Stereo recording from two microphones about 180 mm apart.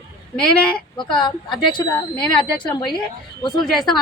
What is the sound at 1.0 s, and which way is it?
A man's voice, 25° left (ahead or behind).